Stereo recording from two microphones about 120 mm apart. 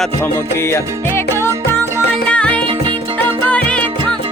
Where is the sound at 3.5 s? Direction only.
10° left (ahead or behind).